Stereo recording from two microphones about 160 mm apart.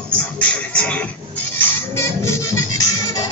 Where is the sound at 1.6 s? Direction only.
15° left (ahead or behind).